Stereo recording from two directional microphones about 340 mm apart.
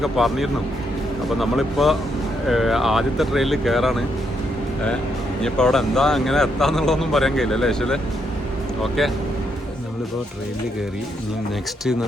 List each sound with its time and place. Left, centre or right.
0.0 s speech: centre
5.4 s speech: centre